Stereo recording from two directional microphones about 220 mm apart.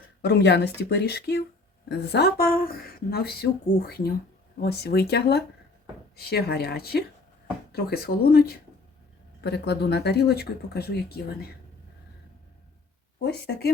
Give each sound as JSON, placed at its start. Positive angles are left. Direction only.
{"t": 0.2, "sound": "speech", "side_deg": 50}
{"t": 13.2, "sound": "speech", "side_deg": 45}